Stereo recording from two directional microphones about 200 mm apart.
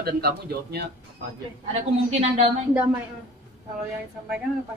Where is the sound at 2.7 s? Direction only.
5° right (ahead or behind).